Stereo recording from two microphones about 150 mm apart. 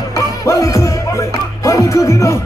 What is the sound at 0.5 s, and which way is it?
Music, 20° left (ahead or behind).